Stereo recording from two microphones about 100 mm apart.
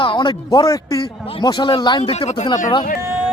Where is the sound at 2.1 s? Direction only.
90° left.